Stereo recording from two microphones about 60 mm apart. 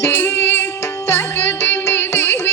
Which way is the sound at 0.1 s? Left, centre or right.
Left.